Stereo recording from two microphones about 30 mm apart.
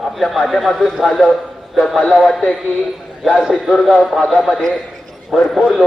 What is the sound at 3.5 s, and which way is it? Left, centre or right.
Speech, centre.